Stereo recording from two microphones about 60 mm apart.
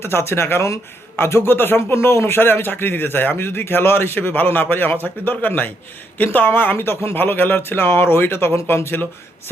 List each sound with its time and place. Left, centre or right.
0.0 s speech: left